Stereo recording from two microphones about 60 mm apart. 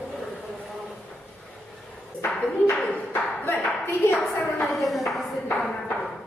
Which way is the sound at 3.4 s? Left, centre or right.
Left.